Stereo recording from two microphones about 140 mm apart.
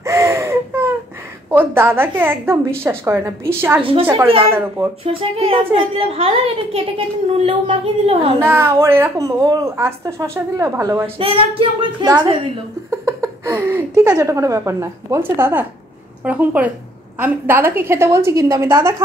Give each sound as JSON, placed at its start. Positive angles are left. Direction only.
{"t": 0.0, "sound": "baby cry", "side_deg": -20}
{"t": 1.5, "sound": "a woman's voice", "side_deg": -15}
{"t": 3.8, "sound": "a woman's voice", "side_deg": -40}
{"t": 4.5, "sound": "a woman's voice", "side_deg": -15}
{"t": 5.0, "sound": "a woman's voice", "side_deg": -40}
{"t": 8.4, "sound": "a woman's voice", "side_deg": -15}
{"t": 11.1, "sound": "a woman's voice", "side_deg": -40}
{"t": 13.0, "sound": "a woman's voice", "side_deg": -20}